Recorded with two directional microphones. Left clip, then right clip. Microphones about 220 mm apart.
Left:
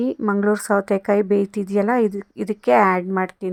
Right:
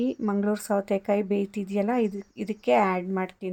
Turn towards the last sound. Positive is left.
turn(degrees=20)  # may be behind; listen again after turning